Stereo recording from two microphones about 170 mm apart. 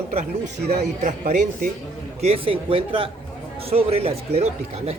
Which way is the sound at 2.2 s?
35° right (ahead or behind).